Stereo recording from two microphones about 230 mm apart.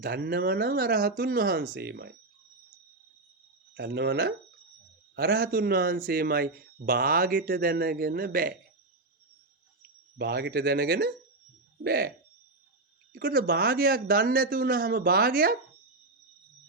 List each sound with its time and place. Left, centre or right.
0.0 s speech: right
3.8 s speech: right
10.2 s speech: right
13.1 s speech: right